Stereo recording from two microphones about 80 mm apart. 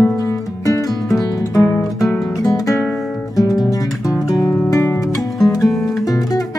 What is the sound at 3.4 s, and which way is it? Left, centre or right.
Guitar, left.